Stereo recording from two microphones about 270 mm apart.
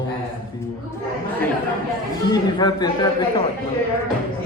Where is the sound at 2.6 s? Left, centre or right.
Centre.